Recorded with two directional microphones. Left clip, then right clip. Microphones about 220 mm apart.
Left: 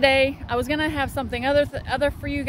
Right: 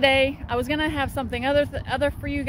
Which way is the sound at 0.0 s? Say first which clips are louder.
Left 1 dB; centre (ahead or behind).